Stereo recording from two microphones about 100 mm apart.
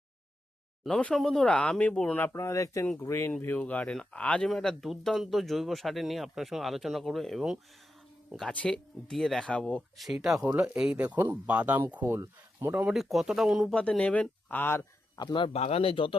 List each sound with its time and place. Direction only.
0.9 s speech: 10° left (ahead or behind)
2.3 s speech: 30° left (ahead or behind); by 7.6 s 5° right (ahead or behind)
8.4 s speech: 5° left (ahead or behind)
10.0 s speech: centre (ahead or behind)
10.4 s speech: 15° right (ahead or behind)
12.9 s speech: centre (ahead or behind)
13.7 s speech: 10° left (ahead or behind)
15.2 s speech: 50° left (ahead or behind)
15.4 s speech: 90° left; by 16.1 s 65° left (ahead or behind)